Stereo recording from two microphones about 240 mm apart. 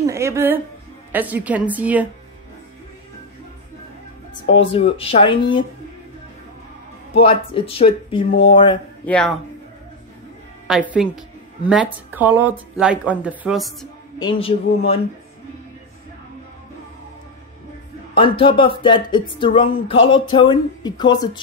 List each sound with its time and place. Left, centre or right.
0.0 s a woman's voice: centre
4.3 s speech: left
7.2 s speech: left
9.0 s a woman's voice: centre
10.7 s a woman's voice: centre
14.1 s speech: left
18.1 s speech: left